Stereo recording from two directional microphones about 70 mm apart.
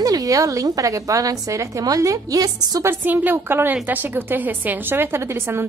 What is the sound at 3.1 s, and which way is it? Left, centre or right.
A woman's voice, right.